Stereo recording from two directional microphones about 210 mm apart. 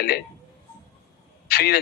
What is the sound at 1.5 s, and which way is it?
Speech, 45° left (ahead or behind).